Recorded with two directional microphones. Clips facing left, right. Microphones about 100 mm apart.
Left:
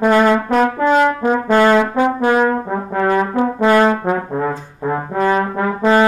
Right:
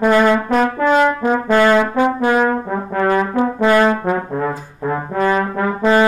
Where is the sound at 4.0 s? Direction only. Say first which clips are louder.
Even; 20° left (ahead or behind).